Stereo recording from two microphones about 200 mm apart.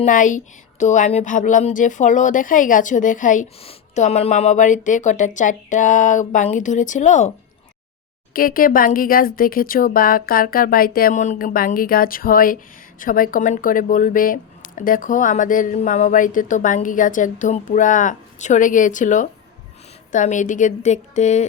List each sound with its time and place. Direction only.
0.0 s speech: 40° left (ahead or behind)